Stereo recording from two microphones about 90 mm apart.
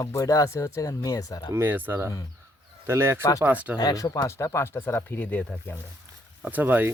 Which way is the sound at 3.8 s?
45° left (ahead or behind).